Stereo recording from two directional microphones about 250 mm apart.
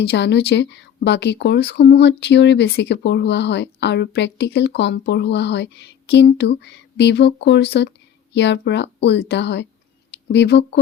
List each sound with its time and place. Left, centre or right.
0.0 s speech: left